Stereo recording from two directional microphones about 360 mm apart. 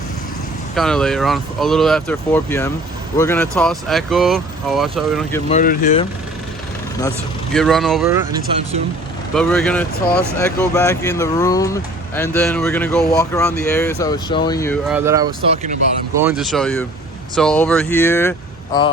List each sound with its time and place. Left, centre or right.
0.8 s speech: centre
5.5 s speech: left
7.5 s speech: centre
9.3 s speech: centre
16.2 s speech: centre